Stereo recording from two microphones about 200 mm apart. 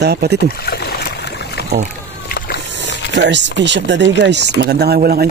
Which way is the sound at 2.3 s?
55° left (ahead or behind).